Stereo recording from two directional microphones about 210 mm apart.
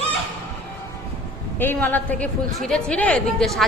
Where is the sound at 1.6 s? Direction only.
10° left (ahead or behind).